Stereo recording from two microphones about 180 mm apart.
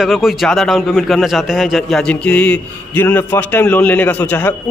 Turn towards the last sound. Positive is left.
turn(degrees=10)  # may be behind; listen again after turning